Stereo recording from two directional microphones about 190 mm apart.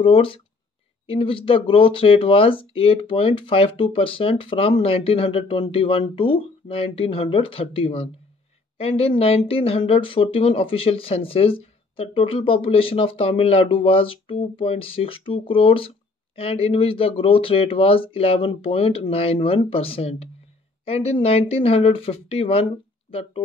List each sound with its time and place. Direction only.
0.0 s speech: 30° left (ahead or behind)